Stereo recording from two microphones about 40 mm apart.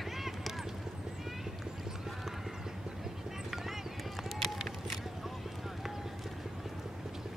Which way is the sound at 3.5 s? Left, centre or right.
Centre.